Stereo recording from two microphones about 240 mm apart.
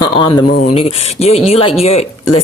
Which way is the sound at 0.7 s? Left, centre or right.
Left.